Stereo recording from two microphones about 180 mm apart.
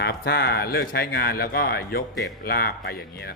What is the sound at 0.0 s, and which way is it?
Speech, 60° left (ahead or behind).